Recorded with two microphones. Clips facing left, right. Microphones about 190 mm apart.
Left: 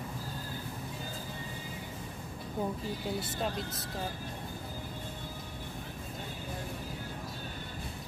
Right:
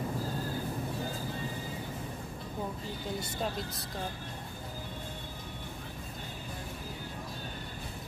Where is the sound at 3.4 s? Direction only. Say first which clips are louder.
Even; centre (ahead or behind).